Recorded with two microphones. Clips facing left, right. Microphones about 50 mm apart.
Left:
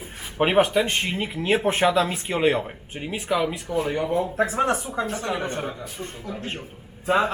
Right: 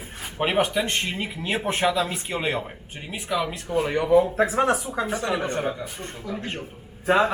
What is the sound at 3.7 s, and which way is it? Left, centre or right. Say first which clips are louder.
Speech: right 1 dB; right.